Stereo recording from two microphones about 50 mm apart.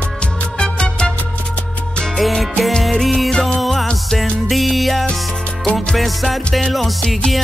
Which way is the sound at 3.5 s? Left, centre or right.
Centre.